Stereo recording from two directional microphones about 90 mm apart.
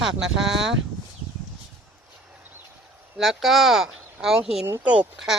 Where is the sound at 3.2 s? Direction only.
Centre (ahead or behind).